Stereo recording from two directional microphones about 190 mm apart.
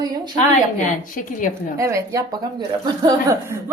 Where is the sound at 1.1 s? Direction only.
45° left (ahead or behind).